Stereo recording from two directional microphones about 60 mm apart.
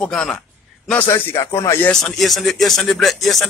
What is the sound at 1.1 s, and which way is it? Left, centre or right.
Speech, left.